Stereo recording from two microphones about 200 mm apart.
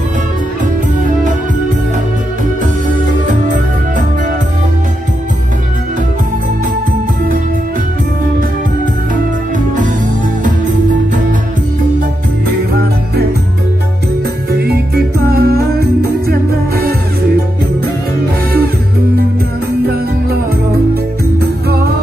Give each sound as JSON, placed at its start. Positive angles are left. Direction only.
{"t": 2.6, "sound": "music", "side_deg": -40}
{"t": 14.5, "sound": "music", "side_deg": -55}